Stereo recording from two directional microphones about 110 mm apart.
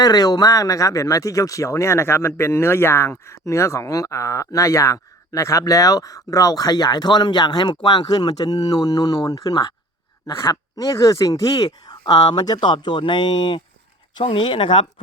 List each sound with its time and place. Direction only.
0.0 s speech: 35° left (ahead or behind)